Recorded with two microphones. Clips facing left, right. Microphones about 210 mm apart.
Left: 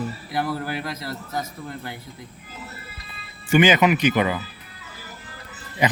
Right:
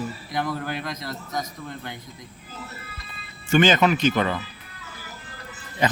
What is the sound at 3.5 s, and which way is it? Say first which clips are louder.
Speech: left 1 dB; 10° left (ahead or behind).